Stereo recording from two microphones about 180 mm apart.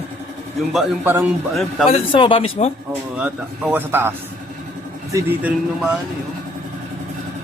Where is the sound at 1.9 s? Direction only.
30° left (ahead or behind).